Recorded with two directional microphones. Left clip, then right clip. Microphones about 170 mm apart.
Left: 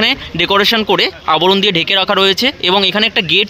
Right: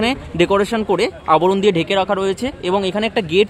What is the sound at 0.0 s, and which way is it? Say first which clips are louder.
Speech: left 4 dB; centre (ahead or behind).